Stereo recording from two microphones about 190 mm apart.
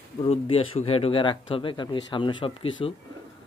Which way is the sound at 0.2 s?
30° left (ahead or behind).